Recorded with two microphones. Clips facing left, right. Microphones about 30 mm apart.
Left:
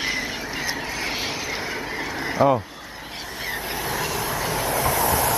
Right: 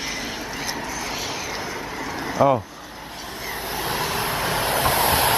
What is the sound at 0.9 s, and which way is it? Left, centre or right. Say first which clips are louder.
Vehicle: left 1 dB; left.